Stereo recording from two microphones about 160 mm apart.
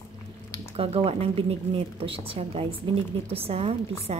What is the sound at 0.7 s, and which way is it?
A woman's voice, 35° right (ahead or behind).